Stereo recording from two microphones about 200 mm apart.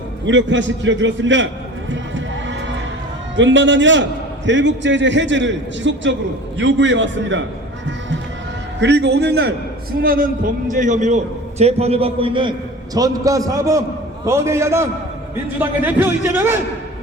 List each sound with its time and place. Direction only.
0.3 s a man's voice: 65° right (ahead or behind)
1.9 s heart sounds: 65° right (ahead or behind)
3.3 s a man's voice: 65° right (ahead or behind)
8.8 s a man's voice: 60° right (ahead or behind); by 16.6 s 10° right (ahead or behind)